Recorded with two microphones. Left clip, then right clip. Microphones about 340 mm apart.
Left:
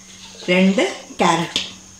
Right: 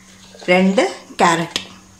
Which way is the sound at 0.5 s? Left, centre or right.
Right.